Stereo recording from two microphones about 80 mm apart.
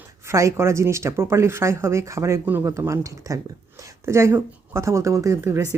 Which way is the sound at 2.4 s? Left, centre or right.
Right.